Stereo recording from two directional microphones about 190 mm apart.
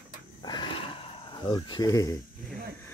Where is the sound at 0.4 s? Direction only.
25° left (ahead or behind).